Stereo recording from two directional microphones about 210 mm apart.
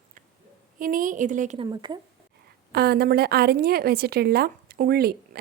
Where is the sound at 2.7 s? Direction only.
50° right (ahead or behind).